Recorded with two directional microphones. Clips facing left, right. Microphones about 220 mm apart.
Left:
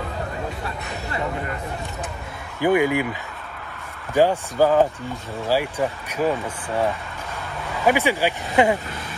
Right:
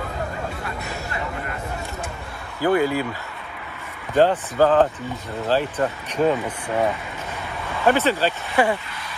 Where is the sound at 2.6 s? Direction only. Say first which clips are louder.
Left 1 dB; 15° left (ahead or behind).